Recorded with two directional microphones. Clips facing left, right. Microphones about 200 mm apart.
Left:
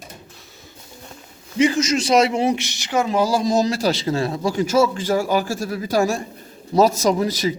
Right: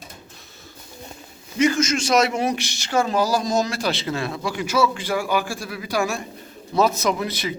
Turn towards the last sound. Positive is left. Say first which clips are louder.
# left 5 dB
turn(degrees=35)  # may be behind; listen again after turning